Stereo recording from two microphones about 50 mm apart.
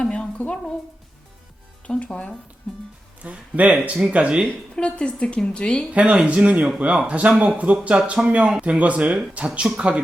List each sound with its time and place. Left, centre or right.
0.0 s stir: centre
0.3 s speech: left
2.0 s speech: left
3.2 s speech: right
4.4 s speech: centre
5.9 s speech: right